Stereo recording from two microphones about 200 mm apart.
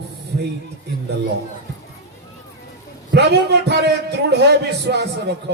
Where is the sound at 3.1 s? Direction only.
55° right (ahead or behind).